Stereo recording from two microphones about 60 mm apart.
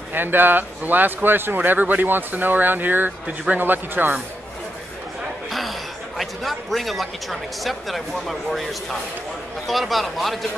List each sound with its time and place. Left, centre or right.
0.1 s speech: right
5.5 s a man's voice: centre
9.7 s a man's voice: centre